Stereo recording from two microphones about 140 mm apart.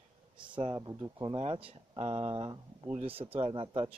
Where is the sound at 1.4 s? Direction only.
40° right (ahead or behind).